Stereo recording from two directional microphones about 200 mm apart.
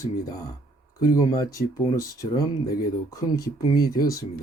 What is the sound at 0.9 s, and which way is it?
Speech, 20° left (ahead or behind).